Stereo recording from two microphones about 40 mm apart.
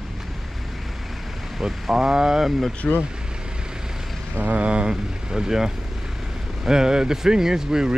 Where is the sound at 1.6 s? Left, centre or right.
Centre.